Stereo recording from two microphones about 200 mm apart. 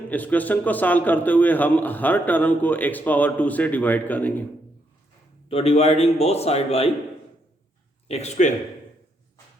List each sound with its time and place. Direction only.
0.1 s a man's voice: 10° left (ahead or behind)
5.5 s a man's voice: 30° left (ahead or behind)
8.0 s a man's voice: 30° left (ahead or behind)